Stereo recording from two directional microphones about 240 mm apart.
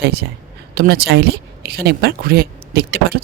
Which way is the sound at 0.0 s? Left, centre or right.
Right.